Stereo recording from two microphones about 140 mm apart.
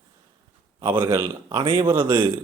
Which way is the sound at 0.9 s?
20° right (ahead or behind).